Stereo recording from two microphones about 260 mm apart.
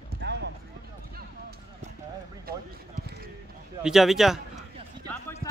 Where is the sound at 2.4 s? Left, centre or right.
Right.